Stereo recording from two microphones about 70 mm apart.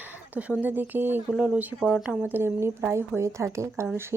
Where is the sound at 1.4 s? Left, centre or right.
Centre.